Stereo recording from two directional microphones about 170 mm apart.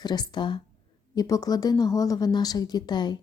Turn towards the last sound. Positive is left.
turn(degrees=25)  # may be behind; listen again after turning